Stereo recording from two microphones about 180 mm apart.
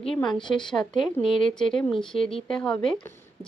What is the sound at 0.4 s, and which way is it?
Speech, 25° left (ahead or behind).